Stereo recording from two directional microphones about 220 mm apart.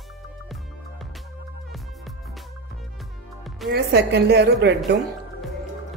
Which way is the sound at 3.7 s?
50° right (ahead or behind).